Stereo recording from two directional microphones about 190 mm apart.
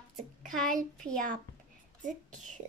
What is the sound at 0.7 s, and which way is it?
Speech, 45° right (ahead or behind).